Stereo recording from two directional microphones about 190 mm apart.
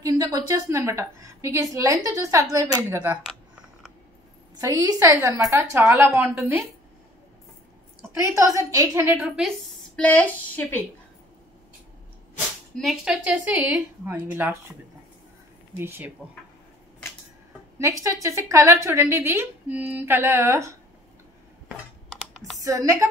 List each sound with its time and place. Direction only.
0.0 s a woman's voice: 20° right (ahead or behind)
4.6 s a woman's voice: 20° right (ahead or behind)
8.2 s a woman's voice: 15° right (ahead or behind)
9.9 s a woman's voice: 10° left (ahead or behind)
12.7 s a woman's voice: centre (ahead or behind)
15.8 s a woman's voice: 10° right (ahead or behind)
17.7 s a woman's voice: 15° right (ahead or behind)
22.6 s speech: 15° right (ahead or behind)